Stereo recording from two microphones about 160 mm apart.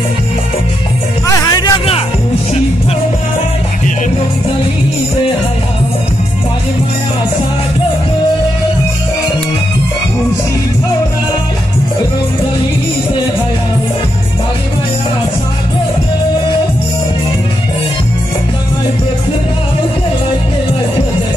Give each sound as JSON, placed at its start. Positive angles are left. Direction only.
{"t": 1.2, "sound": "music", "side_deg": 25}